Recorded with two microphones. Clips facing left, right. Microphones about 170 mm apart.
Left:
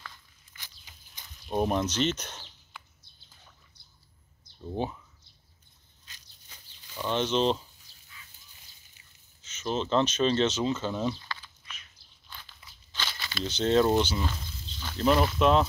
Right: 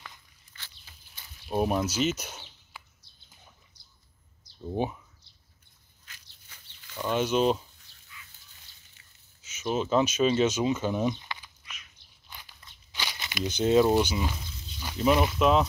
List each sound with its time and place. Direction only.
0.6 s a sound: 15° left (ahead or behind)
1.2 s a sound: 5° right (ahead or behind)
4.6 s speech: 15° right (ahead or behind)
6.5 s chicken: 20° left (ahead or behind)
7.0 s speech: 10° right (ahead or behind)
7.9 s dog: 35° left (ahead or behind)
9.4 s speech: 10° right (ahead or behind)
12.3 s biting: 15° right (ahead or behind)
12.9 s speech: 15° right (ahead or behind)